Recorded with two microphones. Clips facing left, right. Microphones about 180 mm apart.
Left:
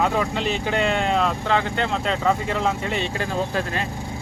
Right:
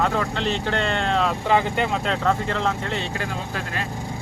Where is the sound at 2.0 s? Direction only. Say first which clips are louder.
Left 1 dB; 5° left (ahead or behind).